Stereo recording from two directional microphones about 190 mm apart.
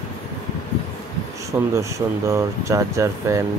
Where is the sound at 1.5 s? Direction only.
15° right (ahead or behind).